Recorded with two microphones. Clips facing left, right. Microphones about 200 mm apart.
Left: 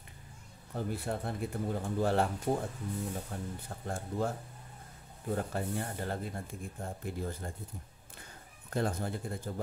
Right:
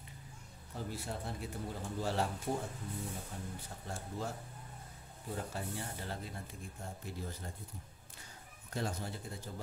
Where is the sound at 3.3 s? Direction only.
60° left (ahead or behind).